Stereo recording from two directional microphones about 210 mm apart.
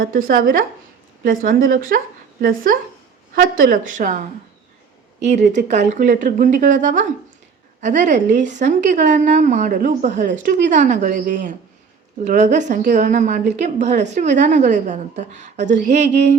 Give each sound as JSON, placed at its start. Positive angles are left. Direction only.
{"t": 0.0, "sound": "a woman's voice", "side_deg": -40}
{"t": 5.2, "sound": "a woman's voice", "side_deg": -35}